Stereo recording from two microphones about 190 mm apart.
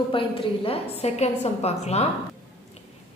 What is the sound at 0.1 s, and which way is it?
A woman's voice, 30° left (ahead or behind).